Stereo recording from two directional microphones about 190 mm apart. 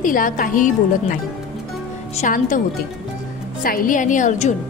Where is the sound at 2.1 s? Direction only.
45° left (ahead or behind).